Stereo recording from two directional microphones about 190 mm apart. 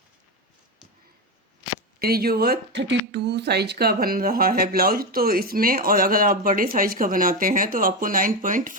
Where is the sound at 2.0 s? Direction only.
55° right (ahead or behind).